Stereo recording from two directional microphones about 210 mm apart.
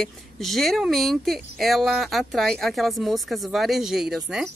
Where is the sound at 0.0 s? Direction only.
Centre (ahead or behind).